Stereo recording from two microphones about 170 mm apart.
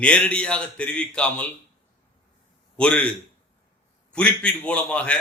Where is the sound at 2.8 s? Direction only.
5° left (ahead or behind).